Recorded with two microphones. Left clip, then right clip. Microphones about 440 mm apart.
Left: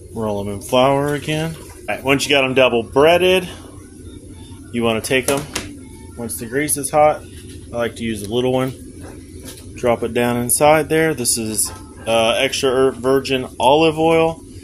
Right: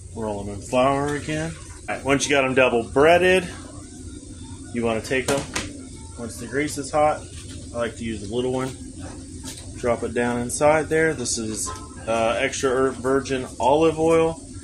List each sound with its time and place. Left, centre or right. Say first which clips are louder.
0.2 s speech: left 6 dB; left
2.0 s speech: left 4 dB; left
4.7 s speech: left 6 dB; left
6.5 s speech: left 6 dB; left
9.8 s speech: left 6 dB; left